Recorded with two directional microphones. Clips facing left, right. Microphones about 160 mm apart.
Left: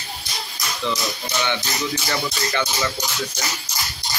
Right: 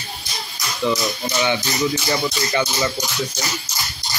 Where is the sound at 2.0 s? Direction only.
15° right (ahead or behind).